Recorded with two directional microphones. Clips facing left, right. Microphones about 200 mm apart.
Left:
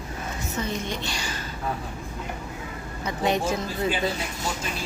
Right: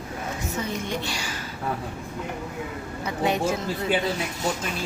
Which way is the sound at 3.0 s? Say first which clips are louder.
Even; 5° right (ahead or behind).